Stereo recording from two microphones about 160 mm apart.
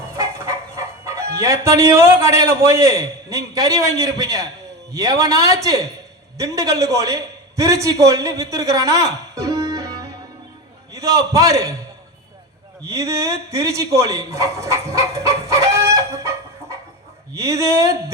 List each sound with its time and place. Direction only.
0.1 s chicken: 15° right (ahead or behind)
1.4 s a man's voice: 20° right (ahead or behind)
12.9 s a man's voice: 20° right (ahead or behind)